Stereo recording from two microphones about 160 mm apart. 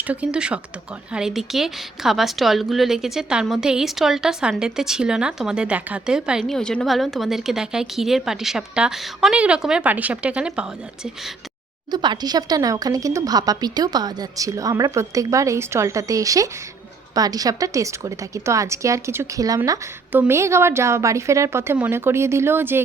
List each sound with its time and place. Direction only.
0.1 s a woman's voice: 5° right (ahead or behind)
11.9 s a woman's voice: 25° right (ahead or behind)